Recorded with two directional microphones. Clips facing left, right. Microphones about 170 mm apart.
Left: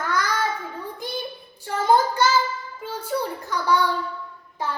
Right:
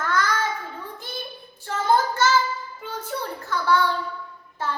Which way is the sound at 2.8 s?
10° left (ahead or behind).